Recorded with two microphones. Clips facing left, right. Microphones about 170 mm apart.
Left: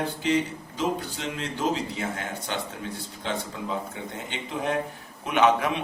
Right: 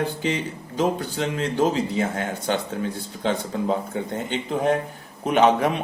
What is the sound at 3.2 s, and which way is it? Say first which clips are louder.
Speech: right 8 dB; 50° right (ahead or behind).